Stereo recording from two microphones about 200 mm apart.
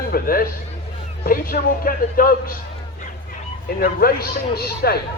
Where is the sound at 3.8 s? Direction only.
50° left (ahead or behind).